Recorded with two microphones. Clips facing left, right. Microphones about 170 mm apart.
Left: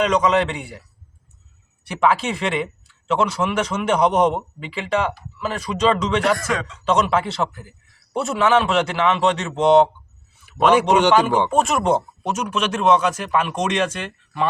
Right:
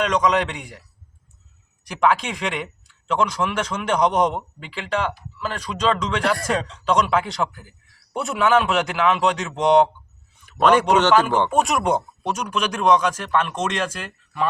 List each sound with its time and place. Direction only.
0.0 s speech: 5° left (ahead or behind)
1.9 s speech: 5° left (ahead or behind)
6.4 s speech: 35° right (ahead or behind)
6.8 s a man's voice: 5° left (ahead or behind)